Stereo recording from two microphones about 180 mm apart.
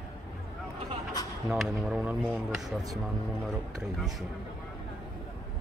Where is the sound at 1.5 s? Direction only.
Centre (ahead or behind).